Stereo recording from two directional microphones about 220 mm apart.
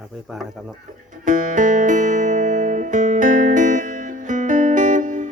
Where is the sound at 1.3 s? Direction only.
35° right (ahead or behind).